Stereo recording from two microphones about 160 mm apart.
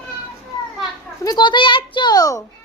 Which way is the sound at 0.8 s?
25° left (ahead or behind).